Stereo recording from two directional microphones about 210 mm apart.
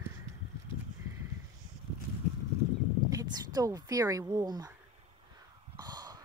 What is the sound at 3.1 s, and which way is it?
Speech, 15° right (ahead or behind).